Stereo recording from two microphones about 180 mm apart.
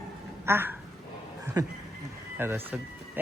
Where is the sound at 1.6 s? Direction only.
20° right (ahead or behind).